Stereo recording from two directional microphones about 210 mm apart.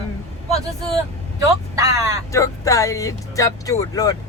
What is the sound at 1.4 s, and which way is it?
Speech, 15° right (ahead or behind).